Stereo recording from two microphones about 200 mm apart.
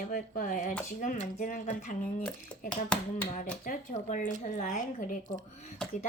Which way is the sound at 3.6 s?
40° left (ahead or behind).